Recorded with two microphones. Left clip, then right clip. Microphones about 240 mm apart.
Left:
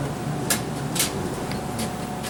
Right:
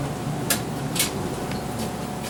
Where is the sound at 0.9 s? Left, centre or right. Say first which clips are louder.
Even; centre.